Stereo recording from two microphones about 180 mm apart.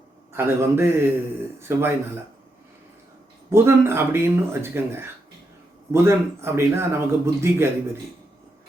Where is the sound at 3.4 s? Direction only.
15° right (ahead or behind).